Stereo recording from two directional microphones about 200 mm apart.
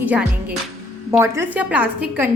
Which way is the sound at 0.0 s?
5° right (ahead or behind).